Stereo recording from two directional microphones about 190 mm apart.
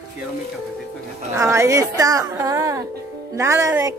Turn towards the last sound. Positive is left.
turn(degrees=-15)  # may be behind; listen again after turning